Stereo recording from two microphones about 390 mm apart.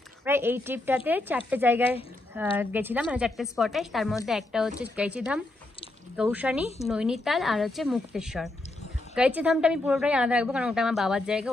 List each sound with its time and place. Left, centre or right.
0.2 s a woman's voice: centre